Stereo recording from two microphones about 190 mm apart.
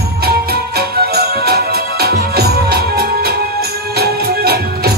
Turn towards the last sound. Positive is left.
turn(degrees=-55)  # may be behind; listen again after turning